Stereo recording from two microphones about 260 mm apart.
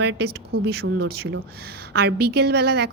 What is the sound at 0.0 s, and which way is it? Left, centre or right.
A woman's voice, right.